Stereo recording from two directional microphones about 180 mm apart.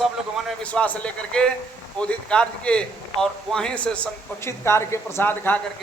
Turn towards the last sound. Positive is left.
turn(degrees=10)  # may be behind; listen again after turning